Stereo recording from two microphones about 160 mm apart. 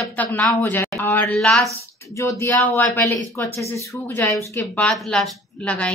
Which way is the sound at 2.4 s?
15° left (ahead or behind).